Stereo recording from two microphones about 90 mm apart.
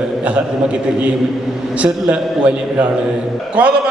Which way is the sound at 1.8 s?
10° right (ahead or behind).